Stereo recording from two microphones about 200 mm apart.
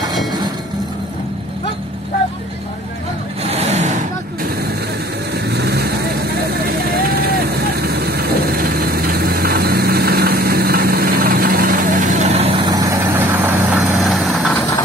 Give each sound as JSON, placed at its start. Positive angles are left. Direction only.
{"t": 3.4, "sound": "vehicle", "side_deg": -30}
{"t": 5.3, "sound": "vehicle", "side_deg": -55}